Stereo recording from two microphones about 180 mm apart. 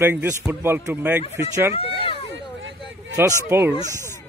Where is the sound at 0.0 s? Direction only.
10° right (ahead or behind).